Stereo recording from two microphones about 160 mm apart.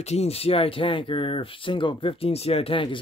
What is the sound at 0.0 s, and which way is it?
Speech, 40° left (ahead or behind).